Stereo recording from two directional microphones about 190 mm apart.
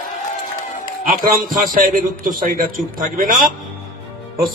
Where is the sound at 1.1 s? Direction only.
50° right (ahead or behind).